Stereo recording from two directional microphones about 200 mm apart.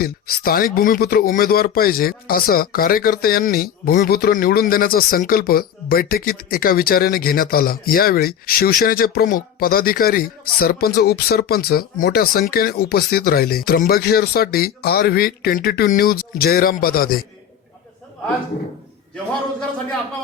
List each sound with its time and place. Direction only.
0.0 s speech: 50° left (ahead or behind)